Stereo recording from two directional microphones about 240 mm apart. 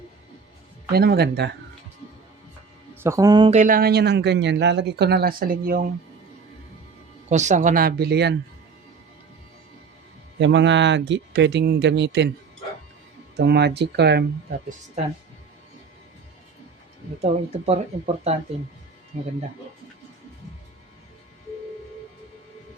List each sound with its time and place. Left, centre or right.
0.9 s speech: right
2.9 s a man's voice: centre
3.6 s speech: right
7.3 s speech: right
10.3 s speech: right
13.3 s speech: right
17.7 s speech: right